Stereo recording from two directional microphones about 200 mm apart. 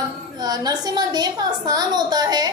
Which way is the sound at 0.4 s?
20° right (ahead or behind).